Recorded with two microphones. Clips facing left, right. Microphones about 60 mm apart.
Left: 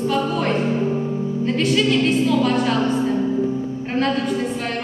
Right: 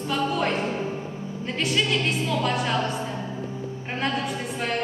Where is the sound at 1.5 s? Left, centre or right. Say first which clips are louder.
Left 6 dB; centre.